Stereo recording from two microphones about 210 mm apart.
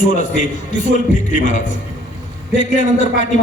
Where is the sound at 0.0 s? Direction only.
40° left (ahead or behind).